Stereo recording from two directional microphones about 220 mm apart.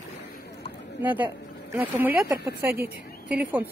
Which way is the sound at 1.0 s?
5° right (ahead or behind).